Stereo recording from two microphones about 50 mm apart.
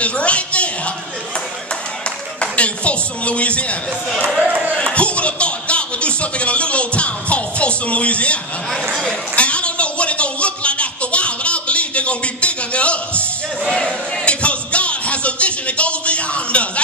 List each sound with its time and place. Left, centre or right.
0.0 s a sound: left
2.4 s speech: left
4.1 s speech: centre
4.7 s speech: left
9.3 s a sound: left
13.7 s speech: centre
14.2 s music: left